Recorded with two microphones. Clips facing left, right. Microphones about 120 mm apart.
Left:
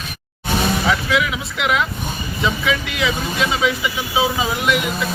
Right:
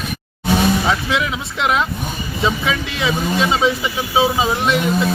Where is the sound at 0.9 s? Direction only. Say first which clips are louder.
Even; 30° right (ahead or behind).